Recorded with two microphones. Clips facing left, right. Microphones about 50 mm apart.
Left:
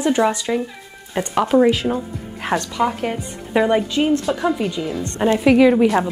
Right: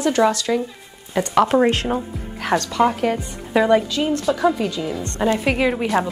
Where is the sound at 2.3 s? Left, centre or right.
Left.